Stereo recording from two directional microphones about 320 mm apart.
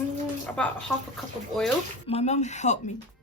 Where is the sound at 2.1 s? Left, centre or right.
Left.